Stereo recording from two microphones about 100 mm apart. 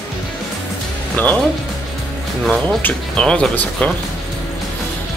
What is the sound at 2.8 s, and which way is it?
Speech, 10° left (ahead or behind).